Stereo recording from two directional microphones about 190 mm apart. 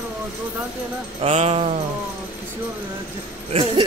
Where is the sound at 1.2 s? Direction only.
30° right (ahead or behind).